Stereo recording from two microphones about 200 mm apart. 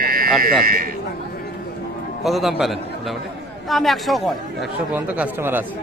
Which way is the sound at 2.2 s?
Centre (ahead or behind).